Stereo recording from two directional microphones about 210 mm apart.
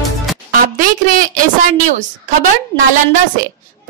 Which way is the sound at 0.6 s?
40° right (ahead or behind).